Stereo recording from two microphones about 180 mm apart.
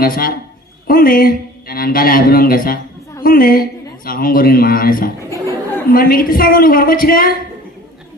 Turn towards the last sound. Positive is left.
turn(degrees=55)  # may be behind; listen again after turning